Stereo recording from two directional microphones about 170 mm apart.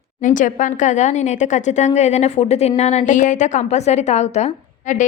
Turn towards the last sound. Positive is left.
turn(degrees=45)  # may be behind; listen again after turning